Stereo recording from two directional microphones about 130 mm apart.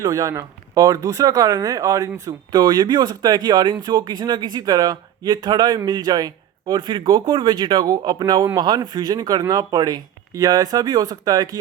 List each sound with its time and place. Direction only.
0.0 s speech: 25° right (ahead or behind)